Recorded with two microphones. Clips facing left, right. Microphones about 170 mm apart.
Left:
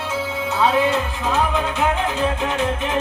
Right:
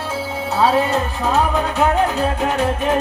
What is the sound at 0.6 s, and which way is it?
Music, 40° right (ahead or behind).